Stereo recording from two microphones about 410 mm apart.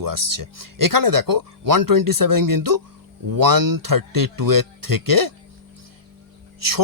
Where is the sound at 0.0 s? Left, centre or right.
Right.